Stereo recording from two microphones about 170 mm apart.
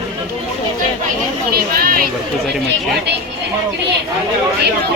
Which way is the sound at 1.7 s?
60° right (ahead or behind).